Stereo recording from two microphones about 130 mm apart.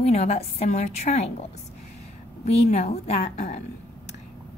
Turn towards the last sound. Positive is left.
turn(degrees=60)  # may be behind; listen again after turning